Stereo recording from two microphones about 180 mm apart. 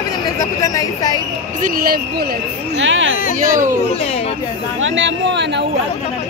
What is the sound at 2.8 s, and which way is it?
Hubbub, 90° right.